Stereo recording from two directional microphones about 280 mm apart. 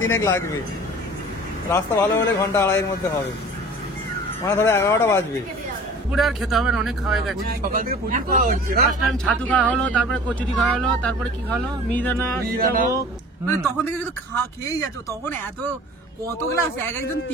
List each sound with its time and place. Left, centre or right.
0.1 s speech: centre
1.7 s speech: centre
4.5 s a man's voice: centre
7.4 s speech: right
8.8 s a man's voice: centre
12.5 s speech: right
14.7 s speech: centre
16.5 s speech: centre